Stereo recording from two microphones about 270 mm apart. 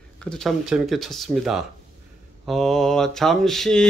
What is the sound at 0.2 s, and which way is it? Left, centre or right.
A man's voice, centre.